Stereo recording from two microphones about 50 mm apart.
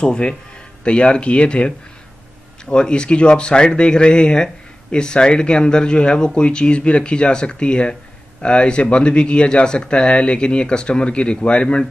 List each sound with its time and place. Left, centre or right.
0.0 s speech: centre